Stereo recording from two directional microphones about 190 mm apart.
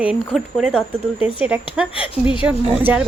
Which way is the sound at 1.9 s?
25° left (ahead or behind).